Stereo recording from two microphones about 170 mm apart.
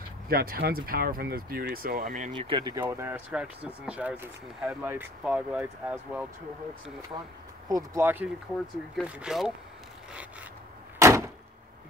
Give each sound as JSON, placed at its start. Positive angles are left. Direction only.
{"t": 0.3, "sound": "speech", "side_deg": -65}
{"t": 2.3, "sound": "speech", "side_deg": -30}
{"t": 2.8, "sound": "speech", "side_deg": -15}
{"t": 7.6, "sound": "speech", "side_deg": -20}
{"t": 11.0, "sound": "door", "side_deg": -15}